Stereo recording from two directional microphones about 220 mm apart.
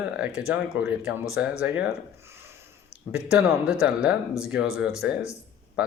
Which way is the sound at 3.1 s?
5° right (ahead or behind).